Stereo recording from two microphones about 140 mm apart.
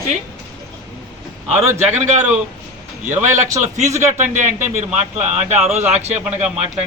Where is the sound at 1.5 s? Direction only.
20° right (ahead or behind).